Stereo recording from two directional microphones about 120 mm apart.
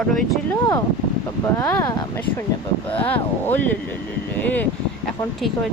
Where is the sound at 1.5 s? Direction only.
25° left (ahead or behind).